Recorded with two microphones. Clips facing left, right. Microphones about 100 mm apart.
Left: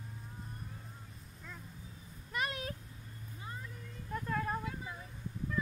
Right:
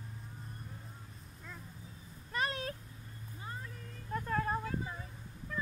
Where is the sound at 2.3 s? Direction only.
35° right (ahead or behind).